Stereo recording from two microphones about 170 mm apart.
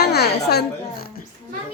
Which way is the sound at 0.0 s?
70° left (ahead or behind).